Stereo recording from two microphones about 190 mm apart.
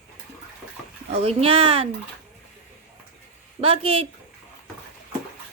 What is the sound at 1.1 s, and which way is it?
Speech, 30° right (ahead or behind).